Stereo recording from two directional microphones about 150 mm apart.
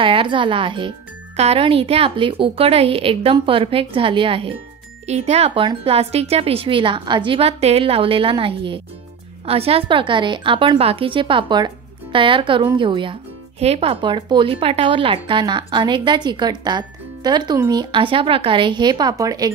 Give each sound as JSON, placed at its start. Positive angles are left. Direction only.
{"t": 0.0, "sound": "a child's voice", "side_deg": -35}